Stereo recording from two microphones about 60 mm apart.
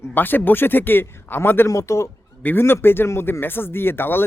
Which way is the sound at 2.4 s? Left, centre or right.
Left.